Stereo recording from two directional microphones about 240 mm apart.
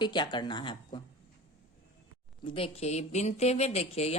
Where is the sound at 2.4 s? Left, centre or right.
Left.